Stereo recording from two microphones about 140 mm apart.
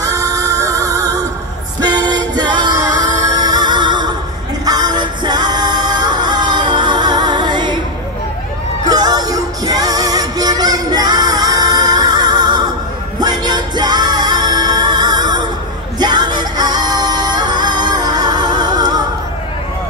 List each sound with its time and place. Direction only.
0.0 s music: 25° right (ahead or behind)
8.8 s music: 30° right (ahead or behind)